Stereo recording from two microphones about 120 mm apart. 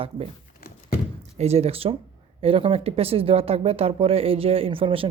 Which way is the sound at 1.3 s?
60° right (ahead or behind).